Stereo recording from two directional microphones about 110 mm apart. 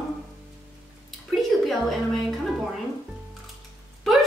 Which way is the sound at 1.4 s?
Centre (ahead or behind).